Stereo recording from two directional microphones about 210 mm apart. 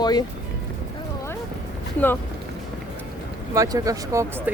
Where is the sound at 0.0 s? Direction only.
20° left (ahead or behind).